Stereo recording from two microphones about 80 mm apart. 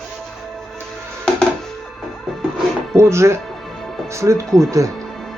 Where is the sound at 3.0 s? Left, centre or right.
Right.